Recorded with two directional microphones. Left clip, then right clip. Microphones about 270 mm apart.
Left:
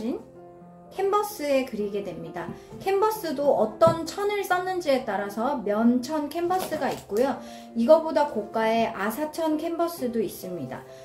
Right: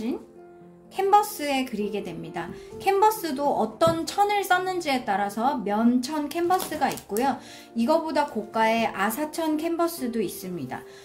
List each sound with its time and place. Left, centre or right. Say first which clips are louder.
0.9 s speech: right 4 dB; right